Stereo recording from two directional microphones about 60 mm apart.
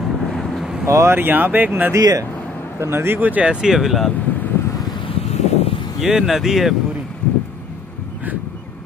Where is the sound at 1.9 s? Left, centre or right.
Right.